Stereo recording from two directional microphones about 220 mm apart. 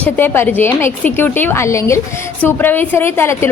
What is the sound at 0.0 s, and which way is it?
A woman's voice, 10° left (ahead or behind).